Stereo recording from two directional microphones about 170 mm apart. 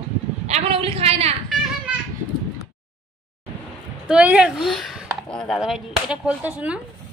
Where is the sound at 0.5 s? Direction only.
40° right (ahead or behind).